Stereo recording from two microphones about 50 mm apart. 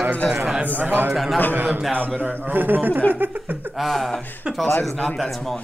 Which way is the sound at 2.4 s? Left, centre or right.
Right.